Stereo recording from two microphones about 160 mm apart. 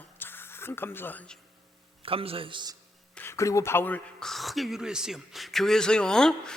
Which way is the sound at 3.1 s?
15° left (ahead or behind).